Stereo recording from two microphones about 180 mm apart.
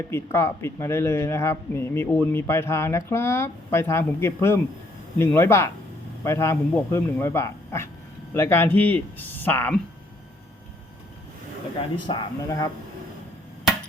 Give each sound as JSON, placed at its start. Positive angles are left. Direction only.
{"t": 0.0, "sound": "speech", "side_deg": 15}
{"t": 12.0, "sound": "speech", "side_deg": 25}